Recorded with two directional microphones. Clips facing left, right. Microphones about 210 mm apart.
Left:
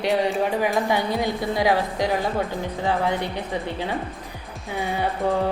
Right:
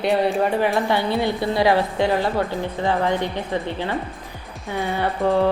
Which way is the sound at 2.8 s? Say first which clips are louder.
Right 2 dB; 10° left (ahead or behind).